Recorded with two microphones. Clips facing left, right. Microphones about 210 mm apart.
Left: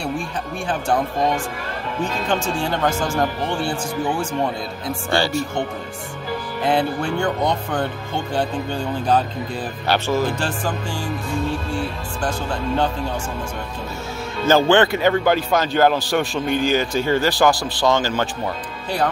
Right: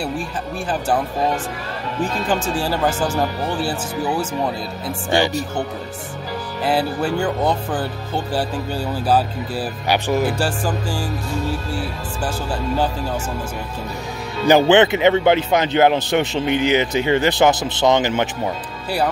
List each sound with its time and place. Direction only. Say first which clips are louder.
2.2 s speech: even; 5° right (ahead or behind)
5.1 s speech: right 2 dB; 20° right (ahead or behind)
6.6 s speech: right 1 dB; 5° right (ahead or behind)
14.4 s speech: right 2 dB; 20° right (ahead or behind)